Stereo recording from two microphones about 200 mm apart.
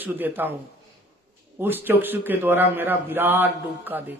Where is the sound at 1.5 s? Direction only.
10° right (ahead or behind).